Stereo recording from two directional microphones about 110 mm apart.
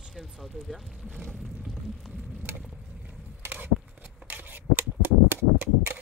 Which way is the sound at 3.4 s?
15° right (ahead or behind).